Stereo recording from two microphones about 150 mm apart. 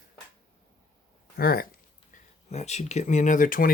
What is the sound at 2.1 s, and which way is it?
Speech, 45° left (ahead or behind).